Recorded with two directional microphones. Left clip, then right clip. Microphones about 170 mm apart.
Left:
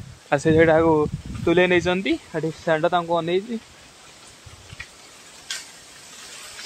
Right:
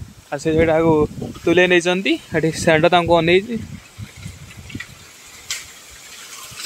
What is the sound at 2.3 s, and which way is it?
Speech, 30° right (ahead or behind).